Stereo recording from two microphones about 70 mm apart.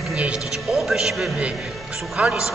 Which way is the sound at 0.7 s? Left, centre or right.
Centre.